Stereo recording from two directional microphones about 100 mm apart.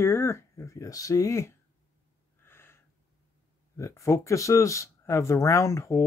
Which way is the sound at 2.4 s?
25° left (ahead or behind).